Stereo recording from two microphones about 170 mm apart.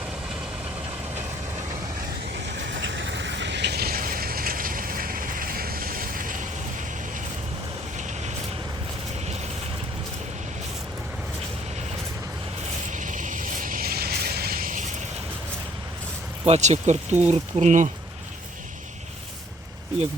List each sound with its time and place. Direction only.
2.6 s vehicle: 90° right; by 6.5 s 50° right (ahead or behind)
7.9 s vehicle: 45° right (ahead or behind)
12.9 s vehicle: 50° right (ahead or behind)
16.5 s speech: 45° right (ahead or behind)